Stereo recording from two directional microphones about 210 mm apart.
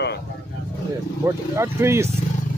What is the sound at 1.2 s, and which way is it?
Speech, 10° right (ahead or behind).